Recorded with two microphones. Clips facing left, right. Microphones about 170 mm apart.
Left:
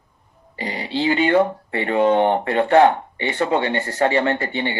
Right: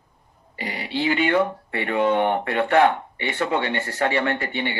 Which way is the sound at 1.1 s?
45° left (ahead or behind).